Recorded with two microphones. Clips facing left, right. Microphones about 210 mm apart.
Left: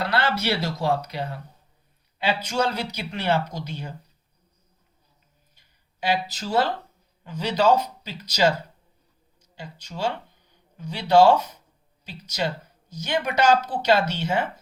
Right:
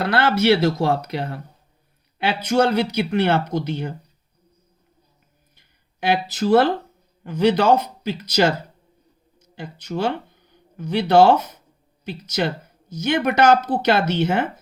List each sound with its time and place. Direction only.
0.0 s speech: 50° right (ahead or behind)
6.3 s speech: 60° right (ahead or behind)
13.0 s speech: 55° right (ahead or behind)